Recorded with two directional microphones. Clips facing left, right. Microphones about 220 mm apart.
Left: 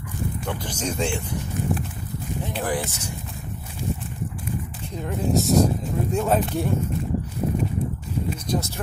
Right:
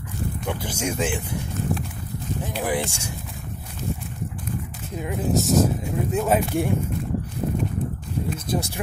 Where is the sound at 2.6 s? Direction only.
10° right (ahead or behind).